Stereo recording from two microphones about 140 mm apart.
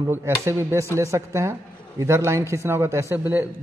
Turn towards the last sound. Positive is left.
turn(degrees=-15)  # may be behind; listen again after turning